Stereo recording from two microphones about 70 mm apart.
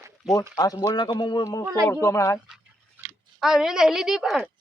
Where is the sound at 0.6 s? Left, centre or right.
Left.